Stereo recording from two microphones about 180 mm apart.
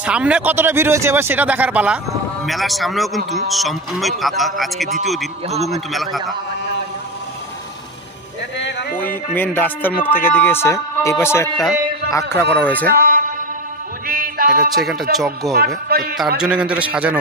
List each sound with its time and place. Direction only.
0.0 s speech: 5° right (ahead or behind)
8.5 s a sound: 75° left (ahead or behind)
8.9 s a man's voice: 50° left (ahead or behind)
9.3 s speech: 10° left (ahead or behind)
12.8 s speech: 55° right (ahead or behind)
14.0 s music: 55° right (ahead or behind)
14.8 s speech: centre (ahead or behind)
15.9 s a man's voice: 60° right (ahead or behind)
16.3 s speech: 5° right (ahead or behind)